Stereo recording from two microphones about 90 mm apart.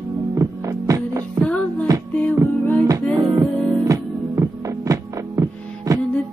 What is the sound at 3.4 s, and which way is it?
Music, 35° right (ahead or behind).